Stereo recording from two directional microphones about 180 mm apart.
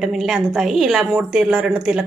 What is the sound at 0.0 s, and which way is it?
A woman's voice, centre (ahead or behind).